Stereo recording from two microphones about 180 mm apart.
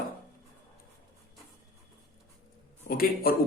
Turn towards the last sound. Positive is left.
turn(degrees=55)  # may be behind; listen again after turning